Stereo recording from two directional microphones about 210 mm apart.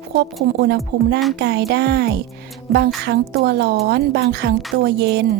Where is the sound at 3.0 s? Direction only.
50° right (ahead or behind).